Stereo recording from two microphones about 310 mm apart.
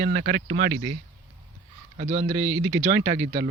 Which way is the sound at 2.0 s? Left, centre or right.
Right.